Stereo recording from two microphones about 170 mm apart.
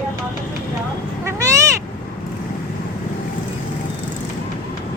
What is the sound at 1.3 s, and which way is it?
Cat, 20° right (ahead or behind).